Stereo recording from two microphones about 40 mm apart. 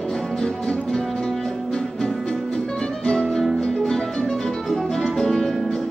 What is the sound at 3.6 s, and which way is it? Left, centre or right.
Music, centre.